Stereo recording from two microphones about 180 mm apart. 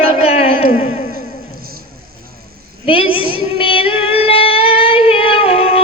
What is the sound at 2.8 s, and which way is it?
Child singing, 30° left (ahead or behind).